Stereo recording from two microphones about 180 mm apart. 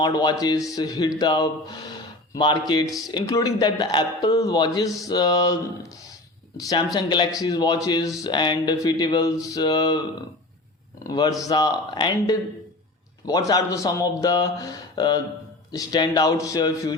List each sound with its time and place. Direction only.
0.0 s a man's voice: 20° left (ahead or behind)
6.6 s a man's voice: 20° left (ahead or behind)
11.0 s a man's voice: 20° left (ahead or behind)